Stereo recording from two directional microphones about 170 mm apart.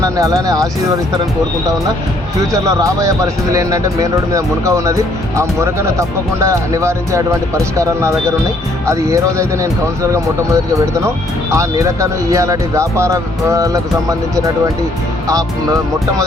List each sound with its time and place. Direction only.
0.0 s speech: 20° right (ahead or behind)
2.5 s speech: 20° right (ahead or behind)